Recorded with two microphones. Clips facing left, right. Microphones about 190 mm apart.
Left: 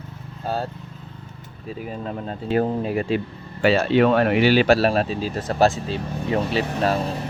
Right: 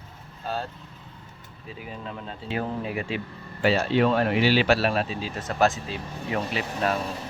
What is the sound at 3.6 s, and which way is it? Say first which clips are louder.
Speech: left 5 dB; 70° left (ahead or behind).